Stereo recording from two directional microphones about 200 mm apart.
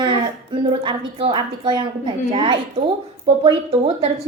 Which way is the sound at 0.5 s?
25° right (ahead or behind).